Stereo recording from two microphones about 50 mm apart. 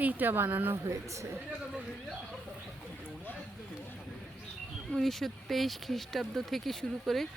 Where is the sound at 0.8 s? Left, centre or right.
Right.